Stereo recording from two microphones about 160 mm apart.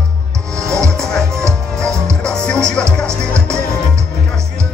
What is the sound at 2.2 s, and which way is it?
Music, 5° left (ahead or behind).